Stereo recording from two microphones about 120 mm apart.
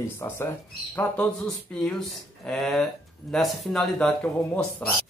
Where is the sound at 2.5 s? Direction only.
5° left (ahead or behind).